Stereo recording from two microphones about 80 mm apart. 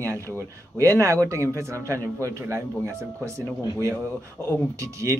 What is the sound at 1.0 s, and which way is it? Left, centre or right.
Speech, right.